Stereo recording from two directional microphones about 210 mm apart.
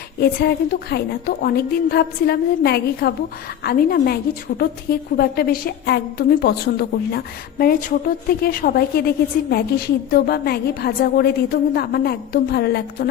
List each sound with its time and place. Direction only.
0.2 s a woman's voice: 45° left (ahead or behind)